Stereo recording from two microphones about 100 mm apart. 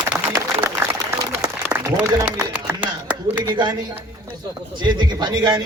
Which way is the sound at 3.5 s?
45° right (ahead or behind).